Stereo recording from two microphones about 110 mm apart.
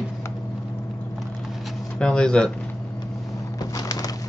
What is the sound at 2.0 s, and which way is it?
Speech, 10° left (ahead or behind).